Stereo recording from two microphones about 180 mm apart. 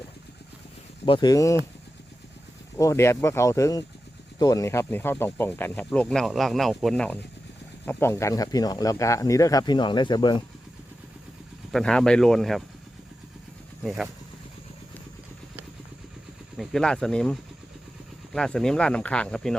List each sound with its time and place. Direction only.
1.0 s speech: 25° left (ahead or behind)
2.7 s speech: 15° left (ahead or behind)
11.7 s speech: 5° left (ahead or behind)
13.8 s speech: centre (ahead or behind)
16.6 s speech: 5° left (ahead or behind)
18.3 s speech: 5° left (ahead or behind)